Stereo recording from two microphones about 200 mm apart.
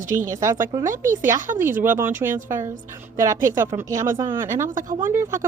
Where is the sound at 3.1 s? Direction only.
15° right (ahead or behind).